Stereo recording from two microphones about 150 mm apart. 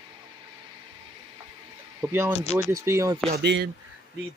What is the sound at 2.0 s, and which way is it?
Speech, 15° right (ahead or behind).